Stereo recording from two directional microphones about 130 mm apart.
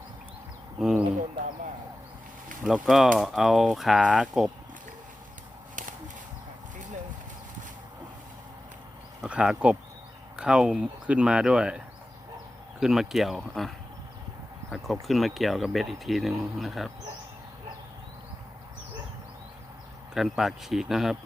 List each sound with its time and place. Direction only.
0.8 s a sound: 5° right (ahead or behind)
2.6 s speech: centre (ahead or behind)
9.2 s speech: 5° right (ahead or behind)
12.8 s speech: 5° right (ahead or behind)
15.0 s speech: centre (ahead or behind)
20.1 s speech: centre (ahead or behind)